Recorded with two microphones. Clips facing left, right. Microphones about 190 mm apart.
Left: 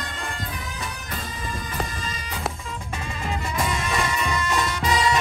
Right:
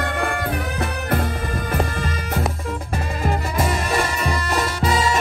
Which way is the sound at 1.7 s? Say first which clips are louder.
Right 7 dB; 60° right (ahead or behind).